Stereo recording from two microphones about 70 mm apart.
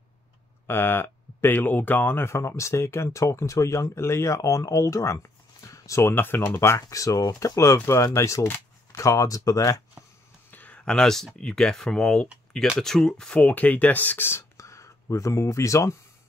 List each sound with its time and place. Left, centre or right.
0.7 s speech: left
6.1 s speech: left
10.5 s a sound: left
10.9 s speech: centre
13.4 s speech: left
14.6 s speech: left